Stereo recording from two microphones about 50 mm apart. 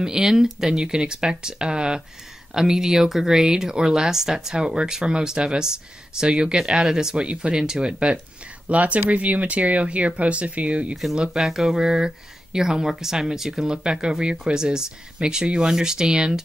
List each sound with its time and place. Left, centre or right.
0.0 s speech: centre
11.3 s speech: centre